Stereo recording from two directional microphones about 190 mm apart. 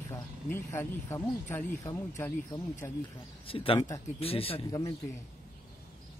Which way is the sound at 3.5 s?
30° left (ahead or behind).